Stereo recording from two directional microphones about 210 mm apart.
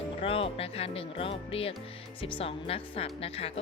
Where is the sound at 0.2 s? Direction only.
25° left (ahead or behind).